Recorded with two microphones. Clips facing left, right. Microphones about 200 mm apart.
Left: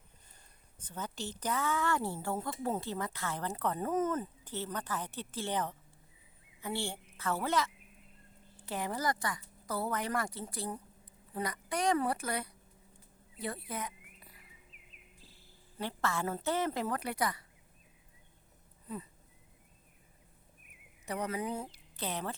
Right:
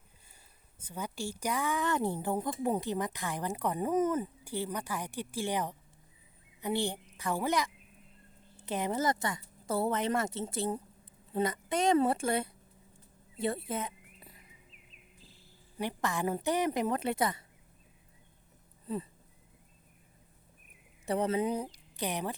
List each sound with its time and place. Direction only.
0.8 s a woman's voice: 10° right (ahead or behind)
13.3 s rodents: 25° right (ahead or behind)
15.8 s speech: 15° right (ahead or behind)
21.1 s speech: 25° right (ahead or behind)